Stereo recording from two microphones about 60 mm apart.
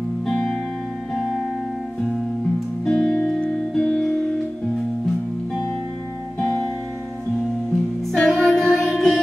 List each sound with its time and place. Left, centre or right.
0.3 s music: centre
2.8 s music: centre
8.1 s music: centre